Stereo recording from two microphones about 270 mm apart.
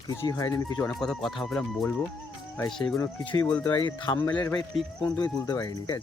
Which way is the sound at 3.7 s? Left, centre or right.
Centre.